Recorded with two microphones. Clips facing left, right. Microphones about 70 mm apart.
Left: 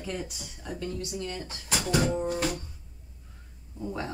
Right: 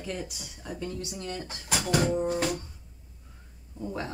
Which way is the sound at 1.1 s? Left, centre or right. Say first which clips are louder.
Left 1 dB; right.